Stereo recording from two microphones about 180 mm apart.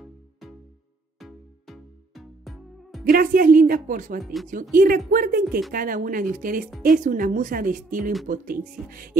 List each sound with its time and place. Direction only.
0.0 s music: centre (ahead or behind)
3.1 s a woman's voice: 55° right (ahead or behind)
4.2 s speech: centre (ahead or behind)
4.5 s a woman's voice: 50° right (ahead or behind)